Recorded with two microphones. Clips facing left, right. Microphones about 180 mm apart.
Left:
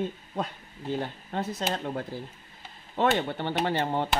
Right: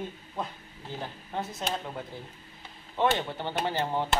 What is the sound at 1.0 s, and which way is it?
Speech, 65° left (ahead or behind).